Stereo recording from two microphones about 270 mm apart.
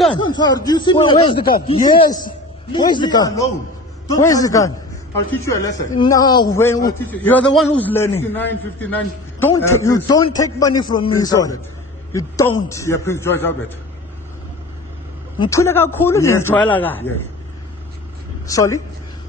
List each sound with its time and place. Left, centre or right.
0.1 s a man's voice: centre
15.3 s a man's voice: centre
18.5 s a man's voice: centre